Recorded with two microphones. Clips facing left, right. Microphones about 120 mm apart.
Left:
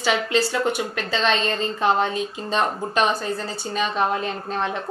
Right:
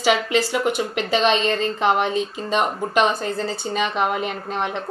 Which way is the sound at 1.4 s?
35° left (ahead or behind).